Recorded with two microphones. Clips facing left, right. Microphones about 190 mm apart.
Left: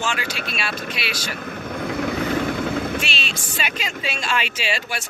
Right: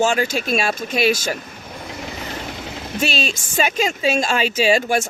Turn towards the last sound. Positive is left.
turn(degrees=-45)  # may be behind; listen again after turning